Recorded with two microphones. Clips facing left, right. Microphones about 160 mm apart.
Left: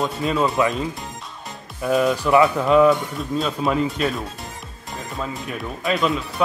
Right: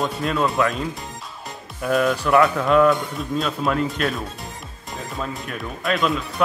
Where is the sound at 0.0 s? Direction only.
Centre (ahead or behind).